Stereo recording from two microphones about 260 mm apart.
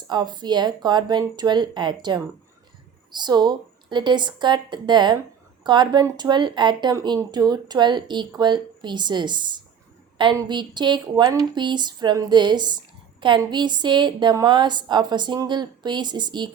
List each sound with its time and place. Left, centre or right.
0.1 s speech: centre